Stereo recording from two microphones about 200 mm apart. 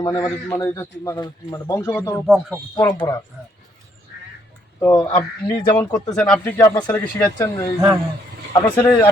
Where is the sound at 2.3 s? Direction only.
Centre (ahead or behind).